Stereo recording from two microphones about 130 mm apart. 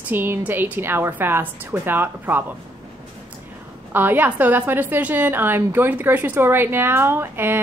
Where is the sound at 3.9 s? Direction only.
15° right (ahead or behind).